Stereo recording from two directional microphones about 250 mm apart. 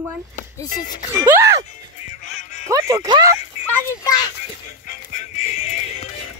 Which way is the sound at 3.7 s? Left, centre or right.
Centre.